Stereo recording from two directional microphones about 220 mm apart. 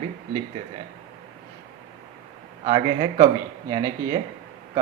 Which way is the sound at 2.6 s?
25° right (ahead or behind).